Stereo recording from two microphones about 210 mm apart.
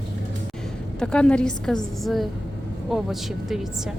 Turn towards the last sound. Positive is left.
turn(degrees=0)  # may be behind; listen again after turning